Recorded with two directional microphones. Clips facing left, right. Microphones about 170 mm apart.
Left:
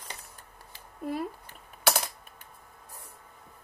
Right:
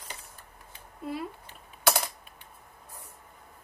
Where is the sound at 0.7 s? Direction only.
45° left (ahead or behind).